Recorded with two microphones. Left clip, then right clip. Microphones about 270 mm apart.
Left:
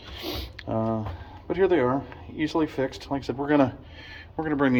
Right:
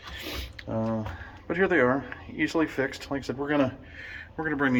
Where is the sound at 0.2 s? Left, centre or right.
Centre.